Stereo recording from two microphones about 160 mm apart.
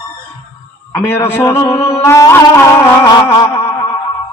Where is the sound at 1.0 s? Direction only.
15° left (ahead or behind).